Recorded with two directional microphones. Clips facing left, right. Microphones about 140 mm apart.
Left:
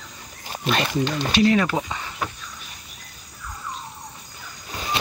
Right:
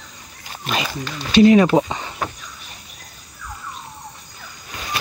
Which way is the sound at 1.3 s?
20° right (ahead or behind).